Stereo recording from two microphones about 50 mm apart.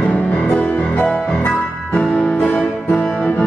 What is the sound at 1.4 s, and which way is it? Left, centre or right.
Music, centre.